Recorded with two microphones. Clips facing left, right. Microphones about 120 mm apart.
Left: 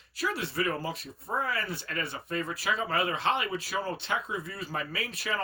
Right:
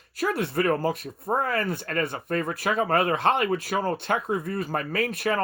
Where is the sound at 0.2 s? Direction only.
50° right (ahead or behind).